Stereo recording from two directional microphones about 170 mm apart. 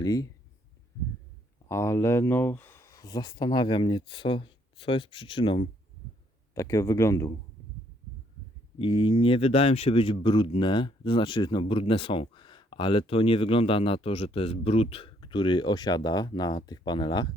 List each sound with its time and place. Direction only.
0.0 s speech: 20° left (ahead or behind)
1.6 s speech: 15° left (ahead or behind)
6.5 s speech: 20° left (ahead or behind)
8.8 s speech: 30° left (ahead or behind)